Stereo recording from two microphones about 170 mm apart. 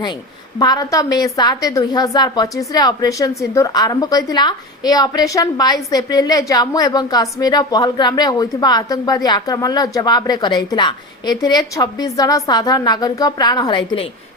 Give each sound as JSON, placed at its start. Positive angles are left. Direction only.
{"t": 0.6, "sound": "a woman's voice", "side_deg": 20}